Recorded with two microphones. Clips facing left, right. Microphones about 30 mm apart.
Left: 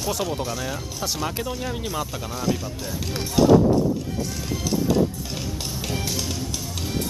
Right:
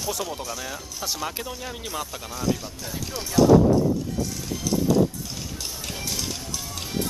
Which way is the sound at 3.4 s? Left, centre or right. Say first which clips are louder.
Even; left.